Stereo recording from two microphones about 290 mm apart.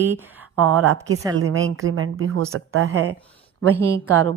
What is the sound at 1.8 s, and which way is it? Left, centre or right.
Speech, right.